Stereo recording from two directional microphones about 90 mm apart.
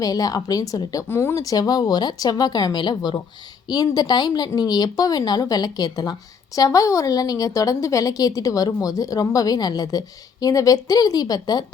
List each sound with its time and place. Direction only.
0.0 s speech: 45° left (ahead or behind)
1.0 s speech: 30° left (ahead or behind)
1.5 s a woman's voice: 45° left (ahead or behind)